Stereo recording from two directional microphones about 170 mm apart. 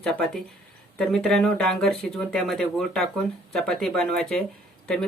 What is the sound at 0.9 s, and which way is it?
Speech, 5° left (ahead or behind).